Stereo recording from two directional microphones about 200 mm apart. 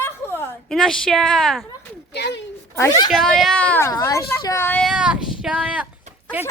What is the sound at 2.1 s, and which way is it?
Speech, 60° left (ahead or behind).